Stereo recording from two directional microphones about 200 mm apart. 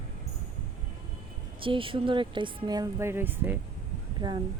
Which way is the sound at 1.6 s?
25° right (ahead or behind).